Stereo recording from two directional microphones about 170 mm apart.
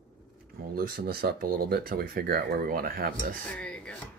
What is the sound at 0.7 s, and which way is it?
Speech, 60° right (ahead or behind).